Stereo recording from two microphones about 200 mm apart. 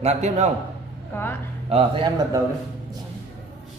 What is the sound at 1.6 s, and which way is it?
Speech, 25° right (ahead or behind).